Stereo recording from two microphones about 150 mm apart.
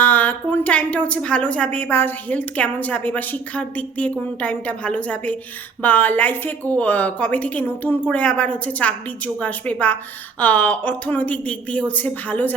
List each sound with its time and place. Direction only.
0.0 s speech: 10° left (ahead or behind)